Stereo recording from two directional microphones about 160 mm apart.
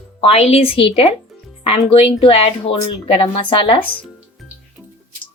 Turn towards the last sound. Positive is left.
turn(degrees=30)  # may be behind; listen again after turning